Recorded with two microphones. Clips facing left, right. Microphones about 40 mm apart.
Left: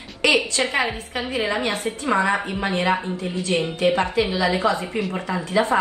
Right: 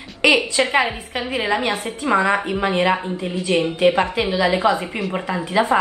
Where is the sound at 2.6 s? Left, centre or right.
Right.